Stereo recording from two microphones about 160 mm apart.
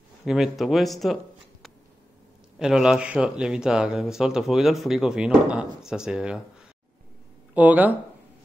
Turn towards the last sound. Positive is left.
turn(degrees=-10)  # may be behind; listen again after turning